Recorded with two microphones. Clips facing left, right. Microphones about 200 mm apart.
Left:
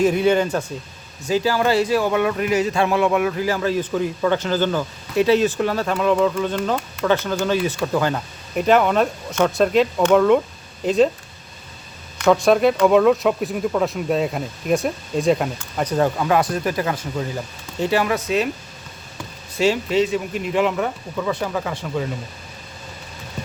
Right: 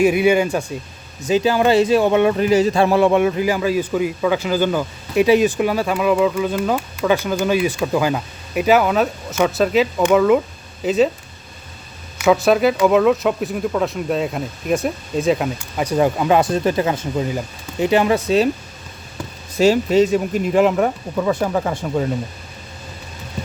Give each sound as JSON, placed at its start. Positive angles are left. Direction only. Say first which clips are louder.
{"t": 0.0, "sound": "a man's voice", "louder": "right 2 dB", "side_deg": -10}
{"t": 12.1, "sound": "speech", "louder": "right 1 dB", "side_deg": -5}
{"t": 19.5, "sound": "speech", "louder": "right 5 dB", "side_deg": -40}